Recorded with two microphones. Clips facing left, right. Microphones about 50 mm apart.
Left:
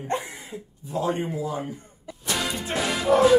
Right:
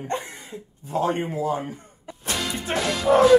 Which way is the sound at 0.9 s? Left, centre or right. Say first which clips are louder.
Right 2 dB; right.